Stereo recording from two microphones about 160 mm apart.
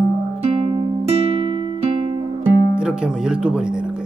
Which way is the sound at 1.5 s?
30° right (ahead or behind).